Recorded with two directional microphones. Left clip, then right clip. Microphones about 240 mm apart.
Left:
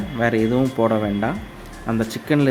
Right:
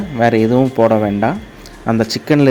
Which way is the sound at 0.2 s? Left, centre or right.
Right.